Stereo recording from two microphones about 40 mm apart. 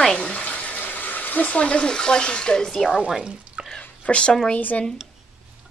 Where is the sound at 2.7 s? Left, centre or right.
Centre.